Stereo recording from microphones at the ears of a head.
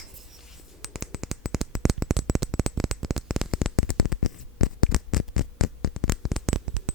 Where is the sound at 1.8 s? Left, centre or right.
Right.